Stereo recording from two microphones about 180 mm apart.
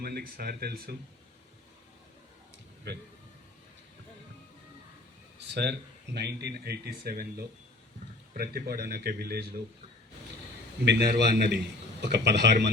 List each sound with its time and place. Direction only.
0.0 s speech: 60° right (ahead or behind)
5.4 s speech: 70° right (ahead or behind)
10.8 s a man's voice: 65° right (ahead or behind)